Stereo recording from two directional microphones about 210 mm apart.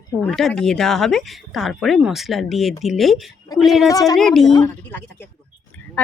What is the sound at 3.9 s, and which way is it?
Speech, 15° left (ahead or behind).